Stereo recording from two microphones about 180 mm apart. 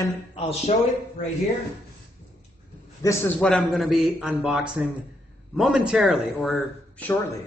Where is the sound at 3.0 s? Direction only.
15° left (ahead or behind); by 6.6 s centre (ahead or behind).